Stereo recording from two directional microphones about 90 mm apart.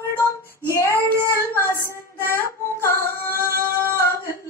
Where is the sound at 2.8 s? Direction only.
25° left (ahead or behind).